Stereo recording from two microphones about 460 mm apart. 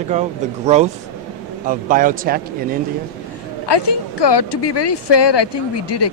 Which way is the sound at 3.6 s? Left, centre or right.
Left.